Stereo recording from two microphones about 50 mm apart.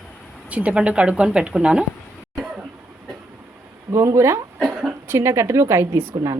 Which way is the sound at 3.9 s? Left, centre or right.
Right.